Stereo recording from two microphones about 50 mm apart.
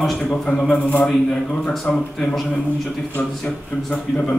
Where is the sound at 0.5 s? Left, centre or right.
Left.